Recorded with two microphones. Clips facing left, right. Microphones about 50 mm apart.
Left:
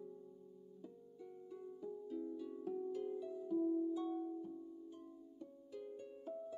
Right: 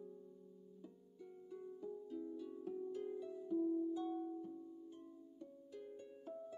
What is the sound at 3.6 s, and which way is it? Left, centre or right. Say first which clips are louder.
Music: left 1 dB; centre.